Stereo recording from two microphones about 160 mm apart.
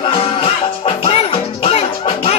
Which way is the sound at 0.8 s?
35° left (ahead or behind).